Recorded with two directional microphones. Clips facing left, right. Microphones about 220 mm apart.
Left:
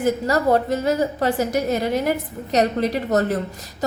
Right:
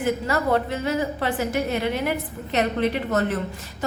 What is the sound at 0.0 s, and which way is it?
A woman's voice, 40° left (ahead or behind).